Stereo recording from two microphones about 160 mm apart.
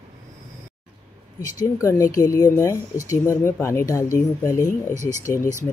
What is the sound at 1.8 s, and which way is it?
Speech, 20° left (ahead or behind).